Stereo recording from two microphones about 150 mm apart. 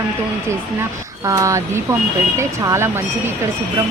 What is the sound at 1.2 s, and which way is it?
Speech, 20° right (ahead or behind).